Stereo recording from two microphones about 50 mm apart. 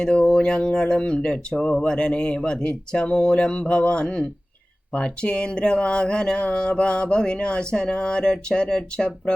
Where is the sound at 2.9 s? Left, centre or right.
Centre.